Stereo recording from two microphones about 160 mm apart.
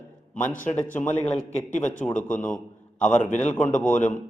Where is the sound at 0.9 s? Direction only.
15° left (ahead or behind).